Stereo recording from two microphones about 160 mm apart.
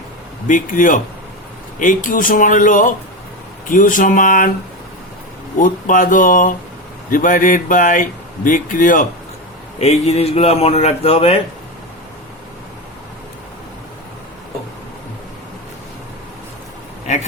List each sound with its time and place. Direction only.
0.4 s speech: 55° left (ahead or behind)
5.5 s speech: 55° left (ahead or behind)
9.7 s speech: 40° left (ahead or behind)